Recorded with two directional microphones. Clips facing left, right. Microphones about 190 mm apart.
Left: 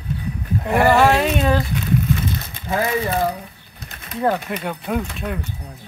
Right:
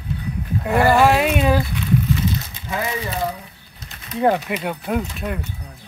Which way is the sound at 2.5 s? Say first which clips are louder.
Left 4 dB; 55° left (ahead or behind).